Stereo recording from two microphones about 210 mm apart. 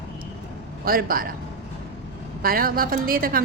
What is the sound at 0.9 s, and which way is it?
Speech, 45° right (ahead or behind).